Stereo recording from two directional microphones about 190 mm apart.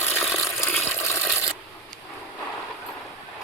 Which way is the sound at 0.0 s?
10° left (ahead or behind).